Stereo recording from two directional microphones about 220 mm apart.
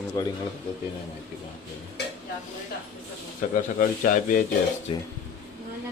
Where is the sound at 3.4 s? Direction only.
40° left (ahead or behind).